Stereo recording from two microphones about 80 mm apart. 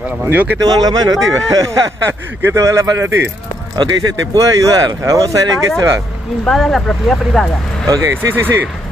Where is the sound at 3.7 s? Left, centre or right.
Right.